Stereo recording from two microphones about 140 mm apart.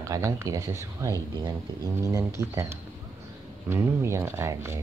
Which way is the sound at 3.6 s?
15° right (ahead or behind).